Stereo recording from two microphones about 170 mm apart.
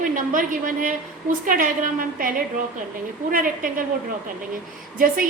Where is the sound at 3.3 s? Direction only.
55° right (ahead or behind).